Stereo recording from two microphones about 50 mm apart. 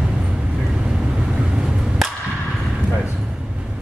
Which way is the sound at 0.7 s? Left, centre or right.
Centre.